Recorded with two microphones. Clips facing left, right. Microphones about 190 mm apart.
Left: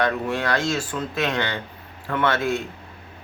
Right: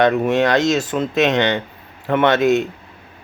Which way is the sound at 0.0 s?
20° right (ahead or behind).